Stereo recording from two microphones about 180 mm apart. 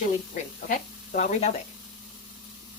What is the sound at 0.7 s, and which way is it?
Speech, 45° left (ahead or behind).